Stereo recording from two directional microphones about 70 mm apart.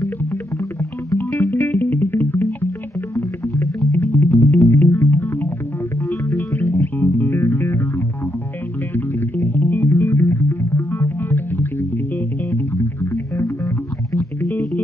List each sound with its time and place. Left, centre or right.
0.0 s music: left
3.2 s music: left
4.0 s music: left
8.9 s music: left